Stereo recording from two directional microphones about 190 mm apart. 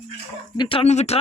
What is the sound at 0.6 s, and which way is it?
Speech, 30° left (ahead or behind).